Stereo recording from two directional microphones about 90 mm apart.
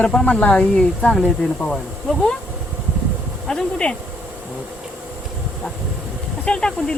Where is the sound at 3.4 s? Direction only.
10° left (ahead or behind).